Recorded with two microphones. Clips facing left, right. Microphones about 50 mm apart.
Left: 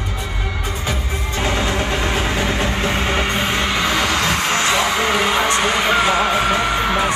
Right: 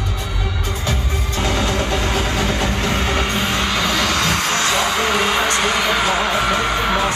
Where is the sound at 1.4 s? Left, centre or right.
Left.